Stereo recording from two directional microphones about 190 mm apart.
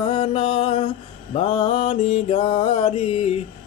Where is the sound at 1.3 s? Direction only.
30° left (ahead or behind).